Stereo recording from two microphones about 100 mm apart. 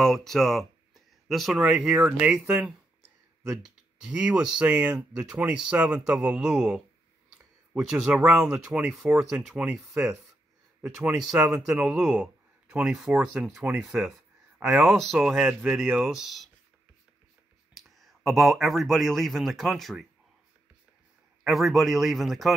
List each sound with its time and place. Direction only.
0.0 s speech: 5° left (ahead or behind); by 8.9 s 15° right (ahead or behind)
8.9 s speech: centre (ahead or behind)
11.3 s speech: 10° right (ahead or behind)
14.6 s speech: 15° right (ahead or behind)
14.9 s speech: centre (ahead or behind)
17.7 s speech: centre (ahead or behind)
21.5 s speech: centre (ahead or behind)